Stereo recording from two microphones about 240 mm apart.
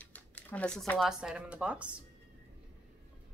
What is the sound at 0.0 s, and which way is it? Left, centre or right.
Speech, centre.